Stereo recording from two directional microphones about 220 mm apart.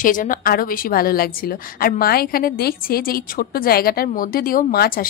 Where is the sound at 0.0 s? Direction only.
35° left (ahead or behind).